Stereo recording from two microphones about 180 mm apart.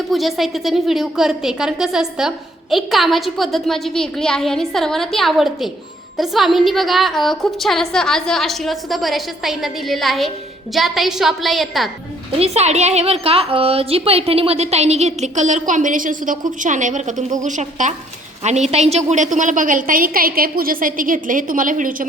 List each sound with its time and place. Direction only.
0.1 s a woman's voice: centre (ahead or behind)
12.4 s a woman's voice: 35° right (ahead or behind)